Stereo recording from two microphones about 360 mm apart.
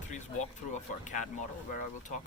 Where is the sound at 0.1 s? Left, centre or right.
Centre.